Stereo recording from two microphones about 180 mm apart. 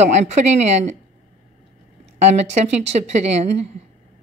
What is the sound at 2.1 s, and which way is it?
A woman's voice, 40° right (ahead or behind).